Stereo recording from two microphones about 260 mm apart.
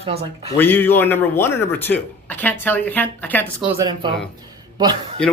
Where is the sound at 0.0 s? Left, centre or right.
Right.